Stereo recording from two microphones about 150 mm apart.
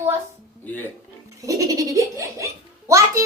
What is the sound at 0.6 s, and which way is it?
Speech, 10° left (ahead or behind).